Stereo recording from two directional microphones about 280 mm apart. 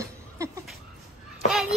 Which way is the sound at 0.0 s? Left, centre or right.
Centre.